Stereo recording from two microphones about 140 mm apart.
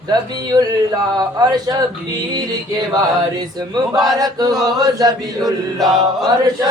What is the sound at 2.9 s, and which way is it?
Speech, 25° right (ahead or behind).